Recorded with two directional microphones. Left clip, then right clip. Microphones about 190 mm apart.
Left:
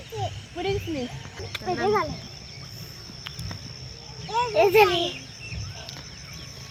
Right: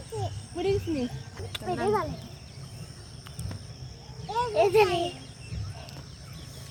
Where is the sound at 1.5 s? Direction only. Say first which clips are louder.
Left 3 dB; 30° left (ahead or behind).